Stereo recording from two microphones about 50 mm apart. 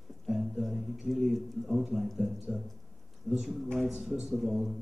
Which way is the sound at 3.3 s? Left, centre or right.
Centre.